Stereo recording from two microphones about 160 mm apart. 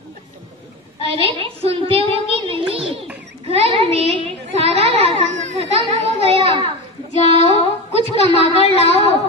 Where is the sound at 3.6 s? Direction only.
40° right (ahead or behind).